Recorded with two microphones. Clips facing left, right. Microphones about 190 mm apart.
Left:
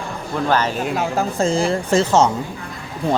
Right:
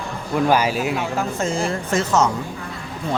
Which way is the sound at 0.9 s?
40° left (ahead or behind).